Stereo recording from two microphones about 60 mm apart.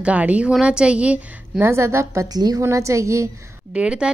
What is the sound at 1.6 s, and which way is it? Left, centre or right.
Speech, right.